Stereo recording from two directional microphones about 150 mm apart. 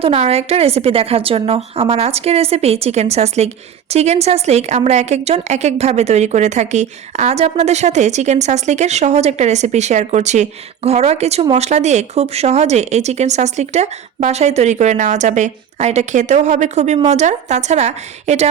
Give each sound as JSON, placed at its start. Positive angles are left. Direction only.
{"t": 0.0, "sound": "a woman's voice", "side_deg": -40}